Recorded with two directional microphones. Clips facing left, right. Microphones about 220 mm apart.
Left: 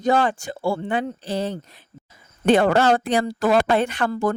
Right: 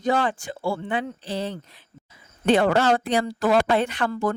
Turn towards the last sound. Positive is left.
turn(degrees=45)  # may be behind; listen again after turning